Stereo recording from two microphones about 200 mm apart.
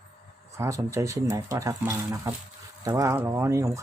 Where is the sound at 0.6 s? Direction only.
15° right (ahead or behind).